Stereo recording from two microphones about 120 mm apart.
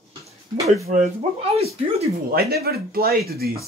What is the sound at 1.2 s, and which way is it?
Speech, 55° right (ahead or behind).